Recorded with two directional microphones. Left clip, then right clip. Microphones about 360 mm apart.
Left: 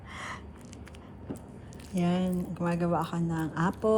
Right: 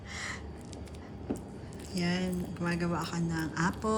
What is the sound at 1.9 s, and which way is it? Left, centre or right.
Speech, centre.